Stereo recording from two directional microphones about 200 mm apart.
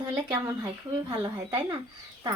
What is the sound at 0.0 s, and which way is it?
A woman's voice, 20° right (ahead or behind).